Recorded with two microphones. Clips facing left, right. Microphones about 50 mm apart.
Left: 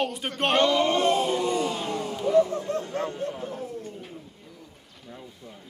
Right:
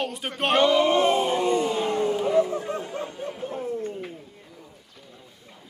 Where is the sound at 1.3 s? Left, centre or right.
Right.